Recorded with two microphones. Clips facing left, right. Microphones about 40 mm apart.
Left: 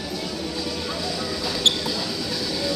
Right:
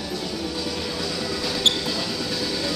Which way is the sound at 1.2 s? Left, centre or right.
Centre.